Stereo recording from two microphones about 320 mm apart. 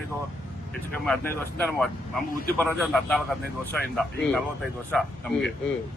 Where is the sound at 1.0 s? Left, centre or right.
Centre.